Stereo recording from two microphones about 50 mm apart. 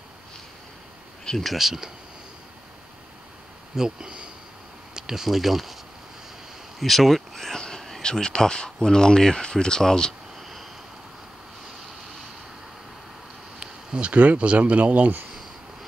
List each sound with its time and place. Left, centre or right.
1.2 s a sound: centre
1.5 s speech: centre
3.7 s speech: centre
6.8 s a sound: centre
8.0 s speech: centre
10.4 s vehicle: centre
13.6 s speech: right